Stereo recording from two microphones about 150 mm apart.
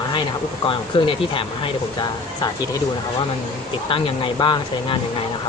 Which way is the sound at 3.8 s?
35° left (ahead or behind).